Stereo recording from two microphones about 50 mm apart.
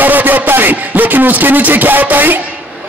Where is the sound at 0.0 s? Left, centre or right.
Right.